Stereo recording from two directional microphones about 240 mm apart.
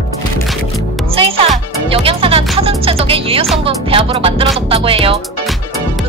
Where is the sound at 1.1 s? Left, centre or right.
Right.